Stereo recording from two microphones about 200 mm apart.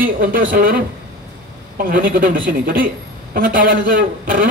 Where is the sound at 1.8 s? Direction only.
45° right (ahead or behind).